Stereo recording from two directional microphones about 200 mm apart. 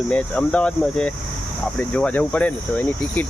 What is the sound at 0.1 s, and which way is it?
Speech, 5° left (ahead or behind).